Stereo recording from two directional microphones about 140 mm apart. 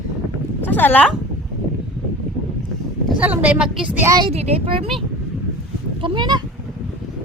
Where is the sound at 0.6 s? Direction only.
15° left (ahead or behind).